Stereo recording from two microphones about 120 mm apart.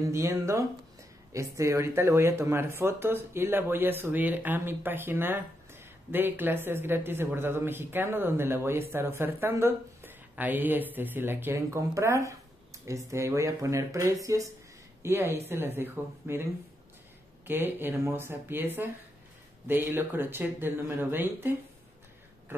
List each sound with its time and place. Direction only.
0.1 s speech: 25° right (ahead or behind)
17.5 s speech: 15° right (ahead or behind)